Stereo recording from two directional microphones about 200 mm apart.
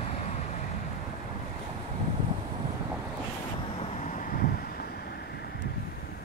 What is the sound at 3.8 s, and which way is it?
Vehicle, 35° left (ahead or behind).